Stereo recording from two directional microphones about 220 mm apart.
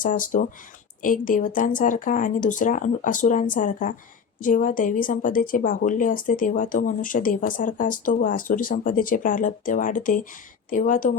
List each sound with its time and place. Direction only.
0.0 s speech: 35° left (ahead or behind)